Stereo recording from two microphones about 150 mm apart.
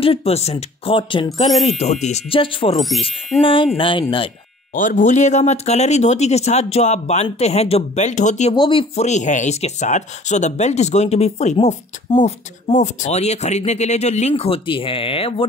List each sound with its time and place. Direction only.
0.0 s speech: 40° left (ahead or behind)
1.5 s speech: centre (ahead or behind)
1.8 s speech: 50° left (ahead or behind)
2.9 s speech: centre (ahead or behind)
3.3 s speech: 20° left (ahead or behind)
3.7 s speech: 35° left (ahead or behind)
4.7 s speech: 60° left (ahead or behind)
8.5 s speech: 35° left (ahead or behind)
9.0 s speech: 55° left (ahead or behind)